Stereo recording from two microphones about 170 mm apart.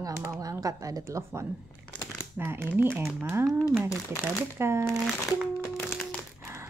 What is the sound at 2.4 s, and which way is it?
Speech, 15° right (ahead or behind).